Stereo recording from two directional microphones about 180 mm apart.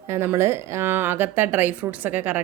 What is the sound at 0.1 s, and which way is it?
Speech, 15° right (ahead or behind).